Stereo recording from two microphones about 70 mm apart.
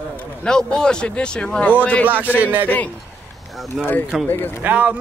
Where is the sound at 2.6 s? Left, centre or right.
Left.